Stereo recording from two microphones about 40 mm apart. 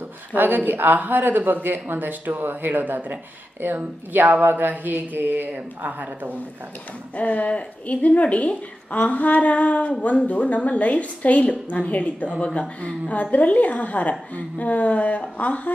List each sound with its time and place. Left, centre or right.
0.3 s speech: right
7.2 s a woman's voice: left